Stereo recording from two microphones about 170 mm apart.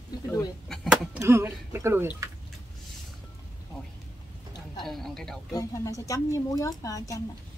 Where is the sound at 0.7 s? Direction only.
5° right (ahead or behind).